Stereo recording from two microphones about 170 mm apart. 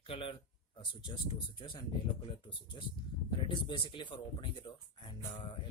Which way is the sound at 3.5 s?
30° left (ahead or behind).